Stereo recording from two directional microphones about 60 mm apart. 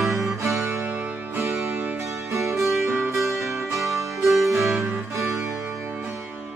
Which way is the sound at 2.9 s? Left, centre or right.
Right.